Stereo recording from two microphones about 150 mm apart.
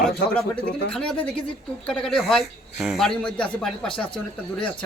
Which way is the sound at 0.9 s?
5° left (ahead or behind).